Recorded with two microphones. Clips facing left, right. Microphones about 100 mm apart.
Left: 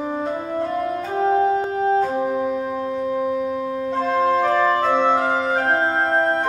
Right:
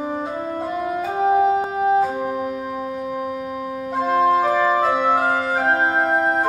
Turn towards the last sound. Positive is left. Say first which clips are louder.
# right 1 dB
turn(degrees=-5)  # may be behind; listen again after turning